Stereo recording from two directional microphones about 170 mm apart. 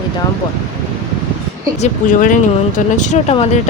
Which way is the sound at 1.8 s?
50° left (ahead or behind).